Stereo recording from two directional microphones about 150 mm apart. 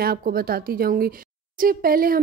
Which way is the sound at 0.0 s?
85° right.